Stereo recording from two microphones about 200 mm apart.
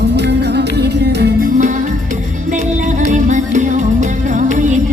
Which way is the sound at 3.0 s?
40° right (ahead or behind).